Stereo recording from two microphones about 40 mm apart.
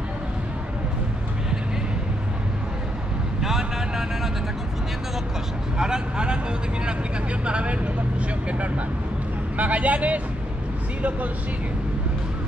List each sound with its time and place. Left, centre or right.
3.3 s speech: centre
5.8 s speech: centre
7.4 s speech: right